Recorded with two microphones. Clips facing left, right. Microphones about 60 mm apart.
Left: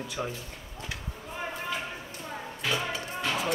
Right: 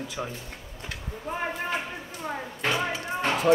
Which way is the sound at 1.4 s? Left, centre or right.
Right.